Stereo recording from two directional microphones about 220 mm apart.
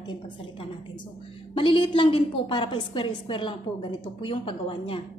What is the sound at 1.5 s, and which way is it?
A woman's voice, 20° left (ahead or behind).